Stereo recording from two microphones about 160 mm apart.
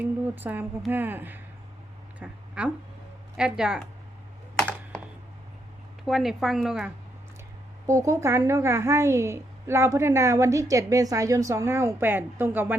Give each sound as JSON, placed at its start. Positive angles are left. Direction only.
{"t": 0.0, "sound": "a woman's voice", "side_deg": -10}
{"t": 2.1, "sound": "a sound", "side_deg": -10}
{"t": 3.3, "sound": "a woman's voice", "side_deg": -5}
{"t": 4.5, "sound": "computer keyboard", "side_deg": 5}
{"t": 6.1, "sound": "a woman's voice", "side_deg": 0}
{"t": 7.9, "sound": "a woman's voice", "side_deg": -20}